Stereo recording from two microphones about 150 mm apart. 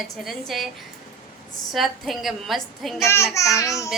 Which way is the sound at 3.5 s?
20° left (ahead or behind).